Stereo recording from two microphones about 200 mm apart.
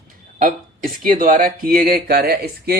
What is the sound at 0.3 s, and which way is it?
Speech, 45° right (ahead or behind).